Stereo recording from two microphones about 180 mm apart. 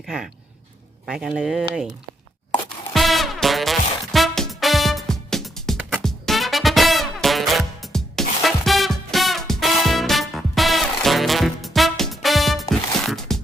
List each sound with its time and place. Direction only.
0.0 s speech: centre (ahead or behind)
2.9 s music: centre (ahead or behind)
13.0 s a sound: centre (ahead or behind)